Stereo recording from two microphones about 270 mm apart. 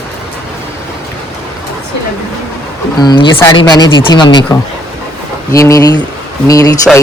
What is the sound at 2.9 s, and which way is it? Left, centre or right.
Speech, centre.